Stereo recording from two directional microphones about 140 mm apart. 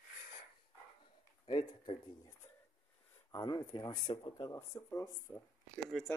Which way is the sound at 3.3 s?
30° left (ahead or behind).